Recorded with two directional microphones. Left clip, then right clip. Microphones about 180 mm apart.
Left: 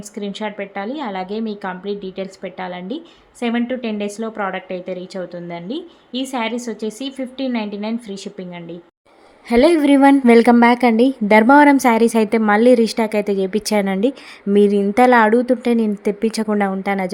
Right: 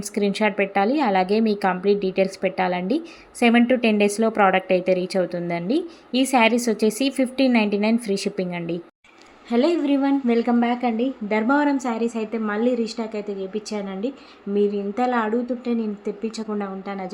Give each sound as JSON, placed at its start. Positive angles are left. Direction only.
{"t": 0.1, "sound": "a woman's voice", "side_deg": -20}
{"t": 9.5, "sound": "a woman's voice", "side_deg": 50}